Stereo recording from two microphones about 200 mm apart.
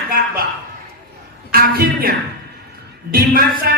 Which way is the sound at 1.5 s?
50° right (ahead or behind).